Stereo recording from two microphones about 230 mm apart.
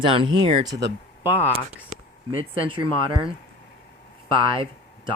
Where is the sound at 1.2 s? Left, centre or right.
Centre.